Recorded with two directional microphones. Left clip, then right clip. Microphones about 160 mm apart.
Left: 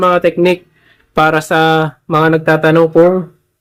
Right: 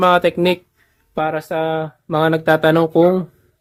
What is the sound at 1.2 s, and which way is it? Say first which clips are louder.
Speech: left 9 dB; 10° left (ahead or behind).